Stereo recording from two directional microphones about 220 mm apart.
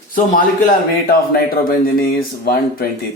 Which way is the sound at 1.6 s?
40° left (ahead or behind).